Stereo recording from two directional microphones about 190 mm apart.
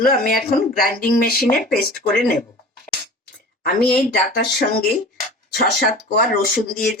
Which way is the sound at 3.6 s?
50° left (ahead or behind).